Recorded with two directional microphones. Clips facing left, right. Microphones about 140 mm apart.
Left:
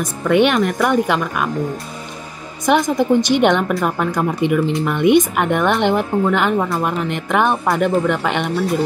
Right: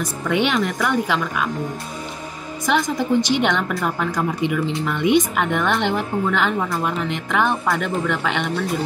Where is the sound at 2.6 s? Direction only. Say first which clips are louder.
Left 5 dB; 50° left (ahead or behind).